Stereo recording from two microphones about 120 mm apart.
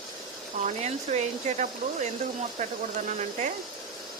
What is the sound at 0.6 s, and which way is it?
Speech, 70° right (ahead or behind).